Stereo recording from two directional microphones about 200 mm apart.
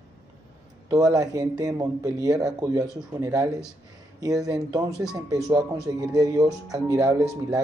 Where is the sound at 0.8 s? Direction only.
15° right (ahead or behind).